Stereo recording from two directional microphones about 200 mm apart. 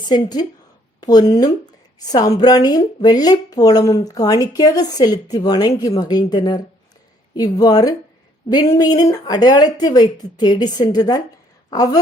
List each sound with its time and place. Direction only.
0.0 s speech: 20° left (ahead or behind)